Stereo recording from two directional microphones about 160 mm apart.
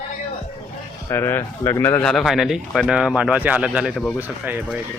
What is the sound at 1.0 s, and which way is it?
Speech, 15° left (ahead or behind).